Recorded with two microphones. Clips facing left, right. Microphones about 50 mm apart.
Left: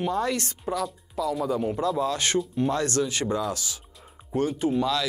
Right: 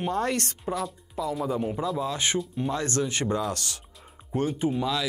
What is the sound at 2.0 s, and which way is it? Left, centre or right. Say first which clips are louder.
Speech: left 2 dB; right.